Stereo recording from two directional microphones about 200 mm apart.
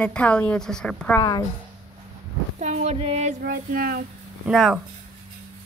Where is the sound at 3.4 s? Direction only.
45° right (ahead or behind).